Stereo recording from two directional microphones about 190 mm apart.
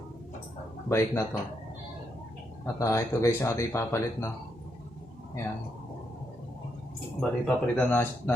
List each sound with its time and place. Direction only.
0.9 s speech: 15° left (ahead or behind)
2.7 s speech: 15° left (ahead or behind)
7.2 s speech: 5° left (ahead or behind)